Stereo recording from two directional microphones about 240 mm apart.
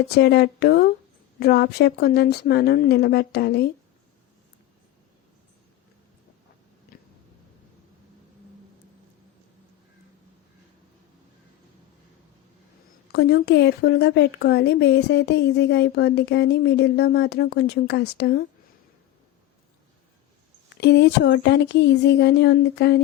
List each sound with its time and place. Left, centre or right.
0.1 s speech: left
13.1 s speech: left
20.8 s speech: left